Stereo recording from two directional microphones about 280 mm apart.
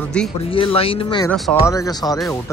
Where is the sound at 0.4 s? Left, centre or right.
Centre.